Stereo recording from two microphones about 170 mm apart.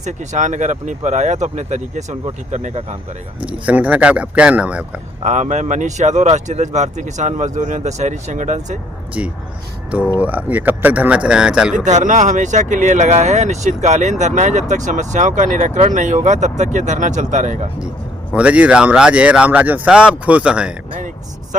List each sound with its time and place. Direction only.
0.0 s speech: 45° right (ahead or behind)
3.4 s speech: 10° right (ahead or behind)
5.2 s speech: 45° right (ahead or behind)
9.2 s speech: 10° right (ahead or behind)
11.9 s speech: 45° right (ahead or behind)
18.3 s speech: 5° right (ahead or behind)